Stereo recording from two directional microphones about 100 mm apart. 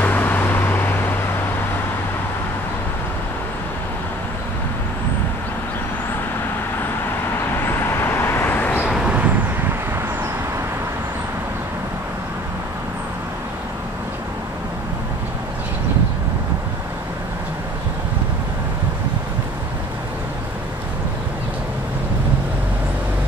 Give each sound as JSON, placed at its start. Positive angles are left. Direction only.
{"t": 0.0, "sound": "vehicle", "side_deg": 20}
{"t": 7.6, "sound": "vehicle", "side_deg": 25}
{"t": 8.8, "sound": "vehicle", "side_deg": -5}
{"t": 9.1, "sound": "vehicle", "side_deg": -15}